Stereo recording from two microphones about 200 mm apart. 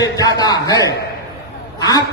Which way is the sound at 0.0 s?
20° left (ahead or behind).